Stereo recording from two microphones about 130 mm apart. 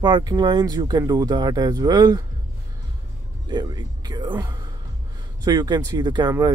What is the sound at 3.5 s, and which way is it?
Speech, 30° right (ahead or behind).